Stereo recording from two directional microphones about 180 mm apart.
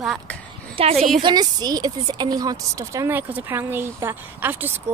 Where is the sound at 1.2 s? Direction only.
20° right (ahead or behind).